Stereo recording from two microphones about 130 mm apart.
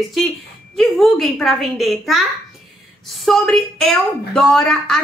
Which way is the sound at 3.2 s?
5° left (ahead or behind).